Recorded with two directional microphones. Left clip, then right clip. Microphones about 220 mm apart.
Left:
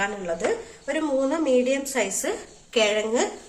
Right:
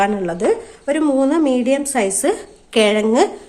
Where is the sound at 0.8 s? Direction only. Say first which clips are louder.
Right 8 dB; 50° right (ahead or behind).